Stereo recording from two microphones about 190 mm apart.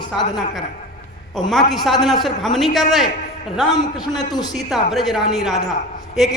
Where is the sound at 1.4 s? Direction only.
Centre (ahead or behind).